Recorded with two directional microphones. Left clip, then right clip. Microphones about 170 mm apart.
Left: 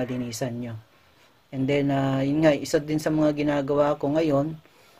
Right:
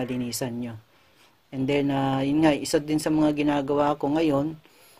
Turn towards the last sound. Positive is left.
turn(degrees=-35)  # may be behind; listen again after turning